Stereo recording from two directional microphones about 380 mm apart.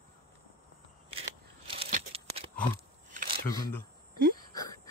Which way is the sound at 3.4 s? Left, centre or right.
Centre.